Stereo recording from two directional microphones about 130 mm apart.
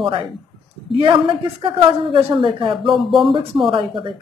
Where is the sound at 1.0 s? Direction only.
40° right (ahead or behind).